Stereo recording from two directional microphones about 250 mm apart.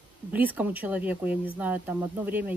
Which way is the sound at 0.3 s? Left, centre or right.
Centre.